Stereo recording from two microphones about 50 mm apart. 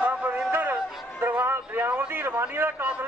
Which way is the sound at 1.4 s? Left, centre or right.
Right.